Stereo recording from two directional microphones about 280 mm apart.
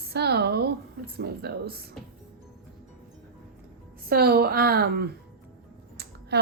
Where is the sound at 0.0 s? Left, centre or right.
Right.